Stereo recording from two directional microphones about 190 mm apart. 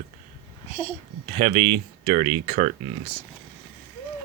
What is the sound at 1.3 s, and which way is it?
Speech, 35° right (ahead or behind).